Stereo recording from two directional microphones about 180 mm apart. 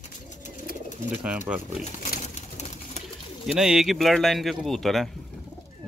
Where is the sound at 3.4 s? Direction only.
Centre (ahead or behind).